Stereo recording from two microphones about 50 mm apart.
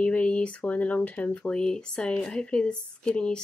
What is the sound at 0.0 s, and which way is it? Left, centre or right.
Speech, left.